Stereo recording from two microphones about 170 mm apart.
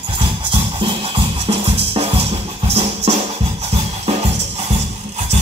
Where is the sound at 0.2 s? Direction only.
30° right (ahead or behind).